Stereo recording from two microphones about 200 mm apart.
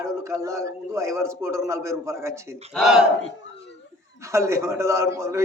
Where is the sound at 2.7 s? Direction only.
5° right (ahead or behind).